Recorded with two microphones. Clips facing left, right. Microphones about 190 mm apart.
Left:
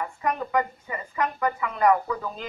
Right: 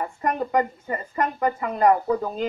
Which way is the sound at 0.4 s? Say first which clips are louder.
Right 3 dB; 35° right (ahead or behind).